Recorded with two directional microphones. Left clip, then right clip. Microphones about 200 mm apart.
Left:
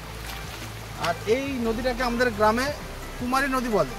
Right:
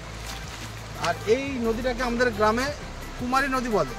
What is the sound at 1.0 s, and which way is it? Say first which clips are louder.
Speech: right 1 dB; 5° right (ahead or behind).